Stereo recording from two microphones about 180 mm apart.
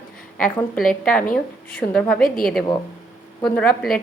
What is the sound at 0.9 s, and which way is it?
A woman's voice, 5° left (ahead or behind).